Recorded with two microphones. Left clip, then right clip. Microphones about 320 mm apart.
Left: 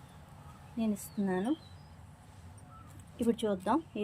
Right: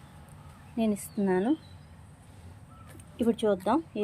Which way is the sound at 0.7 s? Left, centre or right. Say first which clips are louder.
Right 6 dB; centre.